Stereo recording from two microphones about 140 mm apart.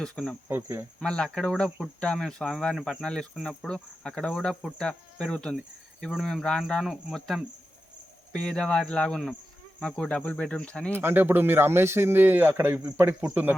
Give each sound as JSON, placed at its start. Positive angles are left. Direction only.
{"t": 0.0, "sound": "speech", "side_deg": 5}
{"t": 0.4, "sound": "speech", "side_deg": -20}
{"t": 0.9, "sound": "speech", "side_deg": 5}
{"t": 10.9, "sound": "speech", "side_deg": -15}